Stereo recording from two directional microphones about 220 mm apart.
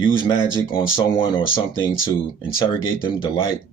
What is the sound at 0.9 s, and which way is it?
Speech, 20° left (ahead or behind).